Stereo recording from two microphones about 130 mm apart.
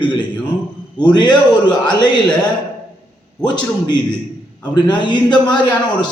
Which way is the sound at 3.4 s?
35° left (ahead or behind).